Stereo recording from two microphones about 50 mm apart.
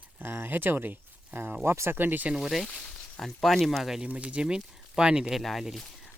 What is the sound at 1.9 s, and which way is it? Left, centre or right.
Speech, right.